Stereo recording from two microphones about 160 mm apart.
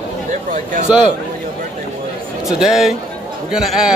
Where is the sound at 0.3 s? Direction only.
55° right (ahead or behind).